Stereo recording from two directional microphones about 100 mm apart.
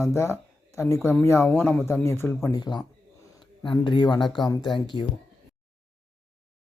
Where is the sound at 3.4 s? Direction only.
50° left (ahead or behind).